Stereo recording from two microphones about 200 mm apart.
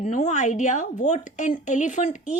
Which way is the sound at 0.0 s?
40° left (ahead or behind).